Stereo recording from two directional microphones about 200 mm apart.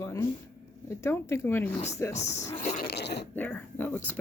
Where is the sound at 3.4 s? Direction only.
10° left (ahead or behind).